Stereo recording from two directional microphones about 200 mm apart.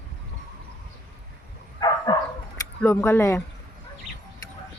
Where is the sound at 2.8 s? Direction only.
10° left (ahead or behind).